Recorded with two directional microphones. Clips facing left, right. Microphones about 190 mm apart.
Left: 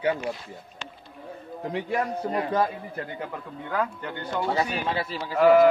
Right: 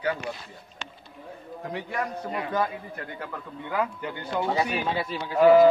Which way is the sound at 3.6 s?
10° right (ahead or behind).